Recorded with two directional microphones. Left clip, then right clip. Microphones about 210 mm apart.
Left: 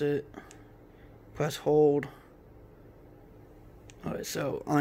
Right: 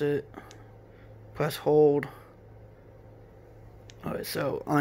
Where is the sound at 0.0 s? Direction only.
Centre (ahead or behind).